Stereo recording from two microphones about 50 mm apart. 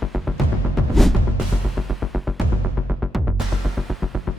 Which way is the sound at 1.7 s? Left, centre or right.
Centre.